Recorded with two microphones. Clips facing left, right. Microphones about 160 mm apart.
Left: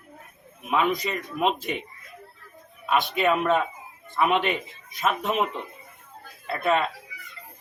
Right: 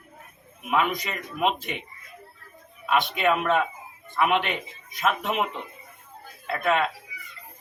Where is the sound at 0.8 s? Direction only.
30° left (ahead or behind).